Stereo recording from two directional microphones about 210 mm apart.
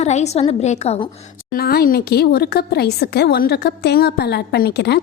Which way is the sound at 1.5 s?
45° left (ahead or behind).